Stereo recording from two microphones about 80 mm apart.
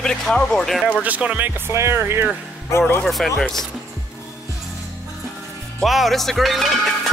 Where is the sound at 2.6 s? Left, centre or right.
Left.